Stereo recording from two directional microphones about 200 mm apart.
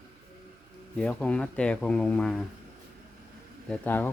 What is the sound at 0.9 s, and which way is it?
Speech, 5° left (ahead or behind).